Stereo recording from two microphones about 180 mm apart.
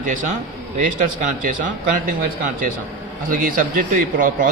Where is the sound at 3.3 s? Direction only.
50° right (ahead or behind).